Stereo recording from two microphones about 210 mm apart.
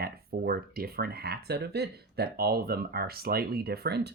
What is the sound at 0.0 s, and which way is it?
Speech, 45° right (ahead or behind).